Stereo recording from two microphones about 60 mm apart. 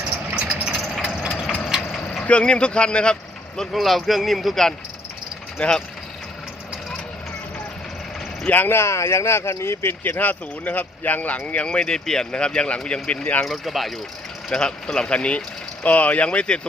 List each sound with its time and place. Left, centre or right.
0.7 s engine: centre
1.7 s vehicle: centre
2.2 s speech: centre
3.7 s a man's voice: centre
5.6 s speech: centre
8.4 s speech: left
8.7 s speech: left
10.0 s speech: left
13.4 s a man's voice: centre
14.5 s speech: centre